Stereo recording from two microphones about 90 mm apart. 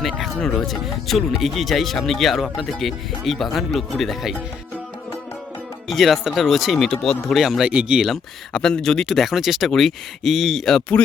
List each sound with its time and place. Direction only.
0.0 s a sound: centre (ahead or behind)
0.3 s speech: 5° left (ahead or behind)
5.9 s speech: centre (ahead or behind)
8.0 s speech: 5° left (ahead or behind)